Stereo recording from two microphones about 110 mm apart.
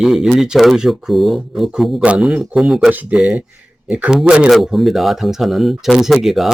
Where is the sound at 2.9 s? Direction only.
15° right (ahead or behind).